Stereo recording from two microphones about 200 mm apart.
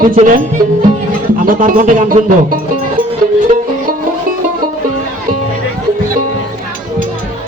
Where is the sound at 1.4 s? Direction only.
40° right (ahead or behind).